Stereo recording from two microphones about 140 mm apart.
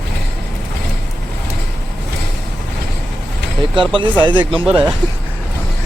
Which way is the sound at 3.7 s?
35° right (ahead or behind).